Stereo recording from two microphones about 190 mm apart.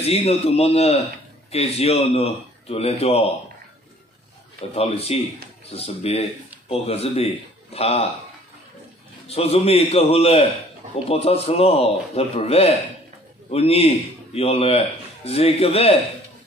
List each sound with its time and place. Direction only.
0.0 s speech: 30° left (ahead or behind)
4.7 s speech: 30° left (ahead or behind)
9.3 s speech: 30° left (ahead or behind)